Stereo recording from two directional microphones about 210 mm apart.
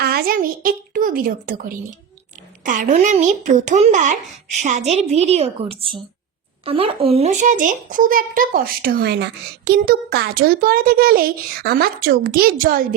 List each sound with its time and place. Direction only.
0.0 s a woman's voice: 45° right (ahead or behind)